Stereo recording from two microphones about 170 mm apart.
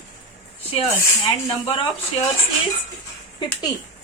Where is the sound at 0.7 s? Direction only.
30° left (ahead or behind).